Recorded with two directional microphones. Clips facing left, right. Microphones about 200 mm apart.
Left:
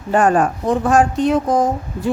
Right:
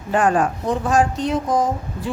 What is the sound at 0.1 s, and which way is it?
Speech, 45° left (ahead or behind).